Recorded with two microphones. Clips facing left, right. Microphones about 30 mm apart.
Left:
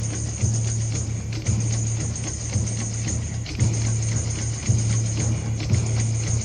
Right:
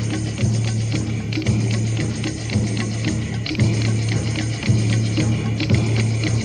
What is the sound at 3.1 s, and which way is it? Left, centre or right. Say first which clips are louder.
Music: right 8 dB; right.